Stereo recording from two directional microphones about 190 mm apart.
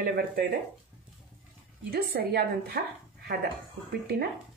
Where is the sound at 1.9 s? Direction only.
55° right (ahead or behind).